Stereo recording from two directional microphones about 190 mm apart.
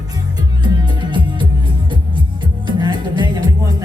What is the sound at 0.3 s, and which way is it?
Music, 20° right (ahead or behind).